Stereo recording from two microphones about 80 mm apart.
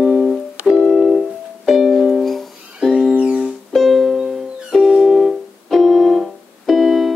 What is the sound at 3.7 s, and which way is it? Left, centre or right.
Music, centre.